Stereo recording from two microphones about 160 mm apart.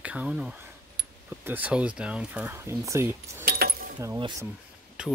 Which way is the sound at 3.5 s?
70° right (ahead or behind).